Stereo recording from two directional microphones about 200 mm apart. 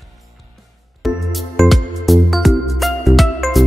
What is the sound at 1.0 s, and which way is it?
Music, centre (ahead or behind).